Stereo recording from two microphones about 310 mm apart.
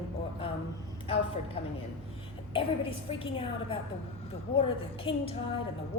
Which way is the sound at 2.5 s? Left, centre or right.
Centre.